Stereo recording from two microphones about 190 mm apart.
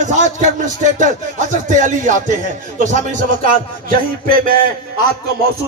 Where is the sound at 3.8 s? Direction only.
50° right (ahead or behind).